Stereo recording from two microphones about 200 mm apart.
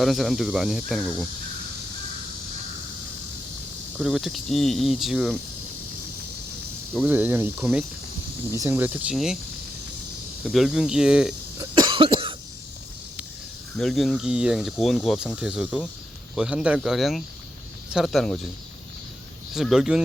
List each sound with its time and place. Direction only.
0.0 s speech: centre (ahead or behind)
3.9 s speech: centre (ahead or behind)
7.0 s speech: 10° right (ahead or behind)
10.4 s speech: centre (ahead or behind)
11.5 s cough: 20° right (ahead or behind)
13.7 s speech: centre (ahead or behind)
19.5 s speech: centre (ahead or behind)